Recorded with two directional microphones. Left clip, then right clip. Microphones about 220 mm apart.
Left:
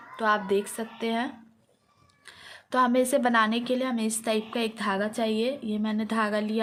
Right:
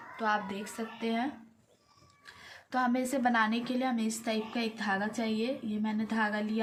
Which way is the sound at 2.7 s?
50° left (ahead or behind).